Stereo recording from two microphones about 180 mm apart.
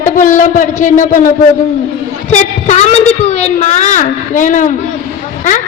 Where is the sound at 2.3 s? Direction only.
40° left (ahead or behind).